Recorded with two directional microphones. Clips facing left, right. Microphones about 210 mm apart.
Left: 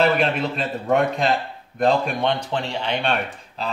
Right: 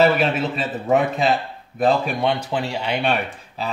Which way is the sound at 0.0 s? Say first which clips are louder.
Right 2 dB; centre (ahead or behind).